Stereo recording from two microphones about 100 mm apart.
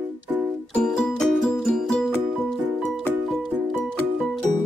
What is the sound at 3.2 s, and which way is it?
Music, centre (ahead or behind).